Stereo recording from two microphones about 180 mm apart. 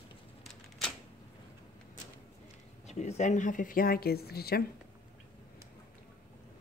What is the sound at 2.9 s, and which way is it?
Speech, 40° left (ahead or behind).